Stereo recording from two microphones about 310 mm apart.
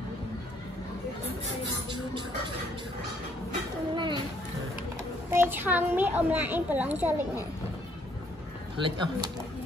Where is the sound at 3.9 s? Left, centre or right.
Centre.